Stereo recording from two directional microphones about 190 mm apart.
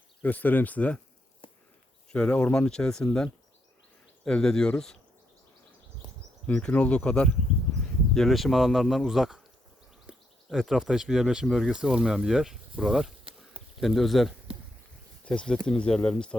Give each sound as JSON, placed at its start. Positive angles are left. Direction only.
{"t": 0.2, "sound": "speech", "side_deg": 10}
{"t": 1.4, "sound": "a sound", "side_deg": 25}
{"t": 2.1, "sound": "speech", "side_deg": 5}
{"t": 6.5, "sound": "speech", "side_deg": 5}
{"t": 13.3, "sound": "a sound", "side_deg": -25}
{"t": 13.8, "sound": "speech", "side_deg": 0}